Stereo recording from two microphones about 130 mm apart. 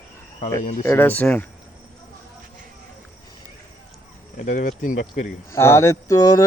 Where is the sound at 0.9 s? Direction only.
15° left (ahead or behind).